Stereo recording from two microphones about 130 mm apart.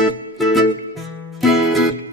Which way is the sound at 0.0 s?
Centre (ahead or behind).